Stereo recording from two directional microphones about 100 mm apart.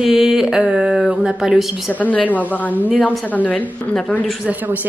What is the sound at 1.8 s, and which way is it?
Speech, 15° left (ahead or behind).